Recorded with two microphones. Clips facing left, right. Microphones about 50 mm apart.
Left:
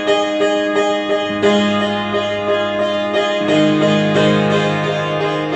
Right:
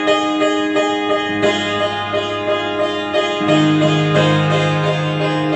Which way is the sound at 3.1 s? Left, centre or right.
Centre.